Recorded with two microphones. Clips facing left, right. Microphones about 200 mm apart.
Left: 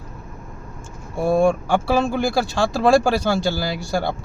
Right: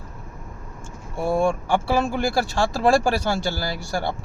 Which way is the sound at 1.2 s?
15° left (ahead or behind).